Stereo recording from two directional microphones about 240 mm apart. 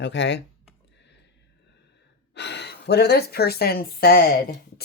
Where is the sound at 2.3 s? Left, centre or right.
Left.